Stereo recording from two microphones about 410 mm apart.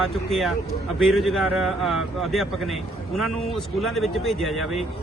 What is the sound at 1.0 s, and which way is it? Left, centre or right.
Speech, centre.